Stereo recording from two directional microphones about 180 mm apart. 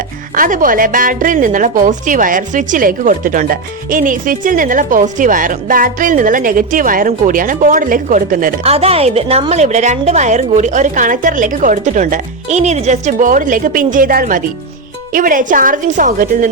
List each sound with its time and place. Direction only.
0.3 s a woman's voice: 50° right (ahead or behind)
8.6 s a woman's voice: 35° right (ahead or behind)